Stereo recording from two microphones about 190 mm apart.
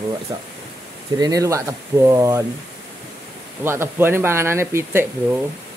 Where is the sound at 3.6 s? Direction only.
10° right (ahead or behind).